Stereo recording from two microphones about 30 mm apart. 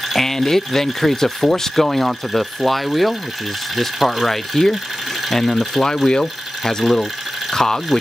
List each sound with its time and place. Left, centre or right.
0.1 s speech: centre
1.9 s speech: centre
5.9 s speech: left
6.8 s speech: centre
7.5 s speech: centre